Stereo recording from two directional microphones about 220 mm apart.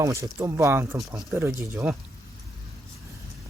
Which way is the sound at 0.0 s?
15° right (ahead or behind).